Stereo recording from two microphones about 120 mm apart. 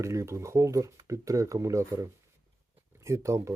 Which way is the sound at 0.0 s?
25° right (ahead or behind).